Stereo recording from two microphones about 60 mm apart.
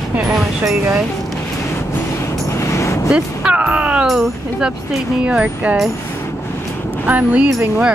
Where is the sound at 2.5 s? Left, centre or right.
Left.